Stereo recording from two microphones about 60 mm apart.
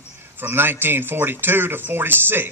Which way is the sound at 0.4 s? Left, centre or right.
Right.